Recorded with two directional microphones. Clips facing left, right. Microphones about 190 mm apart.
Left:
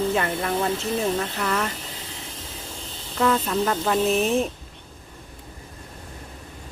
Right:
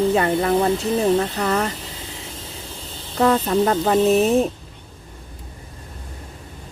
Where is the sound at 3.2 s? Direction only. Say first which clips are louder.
Right 5 dB; 35° right (ahead or behind).